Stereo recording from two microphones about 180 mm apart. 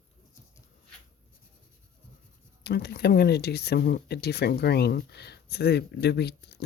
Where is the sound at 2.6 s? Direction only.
65° left (ahead or behind).